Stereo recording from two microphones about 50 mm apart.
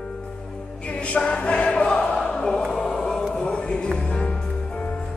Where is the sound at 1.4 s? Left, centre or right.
Centre.